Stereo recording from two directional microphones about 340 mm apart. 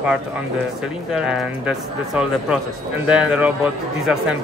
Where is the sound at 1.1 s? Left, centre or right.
Centre.